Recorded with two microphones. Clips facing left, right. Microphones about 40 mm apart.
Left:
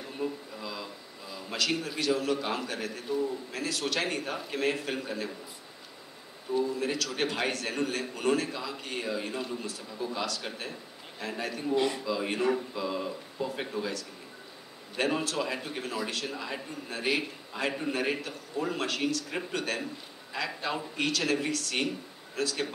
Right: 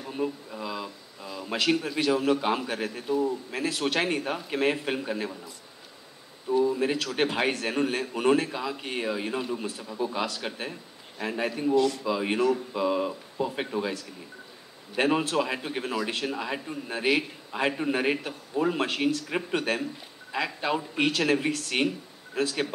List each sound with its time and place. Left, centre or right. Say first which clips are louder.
0.2 s a sound: right 4 dB; right
1.5 s speech: right 5 dB; right
6.6 s speech: right 5 dB; right
11.7 s a man's voice: right 4 dB; left
12.0 s speech: right 4 dB; right
20.4 s a man's voice: right 4 dB; centre
20.9 s speech: right 4 dB; right